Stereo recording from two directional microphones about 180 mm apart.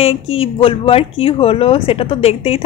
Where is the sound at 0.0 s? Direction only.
30° left (ahead or behind).